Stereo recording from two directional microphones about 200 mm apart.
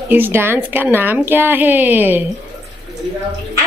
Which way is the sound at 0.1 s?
10° right (ahead or behind).